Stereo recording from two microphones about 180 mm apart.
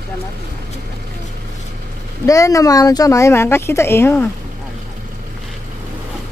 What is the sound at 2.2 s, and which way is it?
Speech, 20° left (ahead or behind).